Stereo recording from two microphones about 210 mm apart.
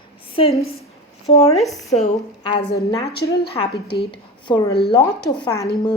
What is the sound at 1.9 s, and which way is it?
Speech, 25° left (ahead or behind).